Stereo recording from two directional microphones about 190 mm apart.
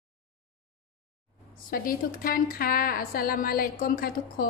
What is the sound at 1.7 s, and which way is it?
A woman's voice, 50° left (ahead or behind).